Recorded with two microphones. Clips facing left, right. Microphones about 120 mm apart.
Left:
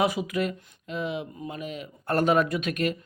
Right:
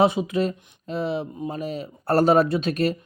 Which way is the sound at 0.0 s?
25° right (ahead or behind).